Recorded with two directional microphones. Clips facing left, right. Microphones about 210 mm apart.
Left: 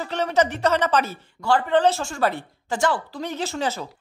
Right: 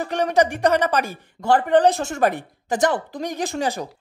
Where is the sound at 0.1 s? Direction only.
15° right (ahead or behind).